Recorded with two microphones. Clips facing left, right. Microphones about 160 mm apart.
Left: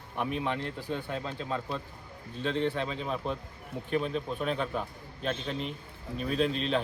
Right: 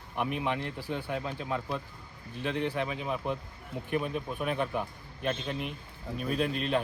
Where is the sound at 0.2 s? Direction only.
15° right (ahead or behind).